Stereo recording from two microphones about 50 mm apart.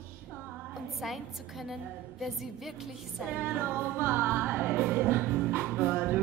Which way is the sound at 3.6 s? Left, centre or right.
Right.